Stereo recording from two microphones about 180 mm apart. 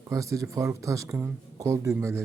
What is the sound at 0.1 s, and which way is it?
Speech, 15° right (ahead or behind).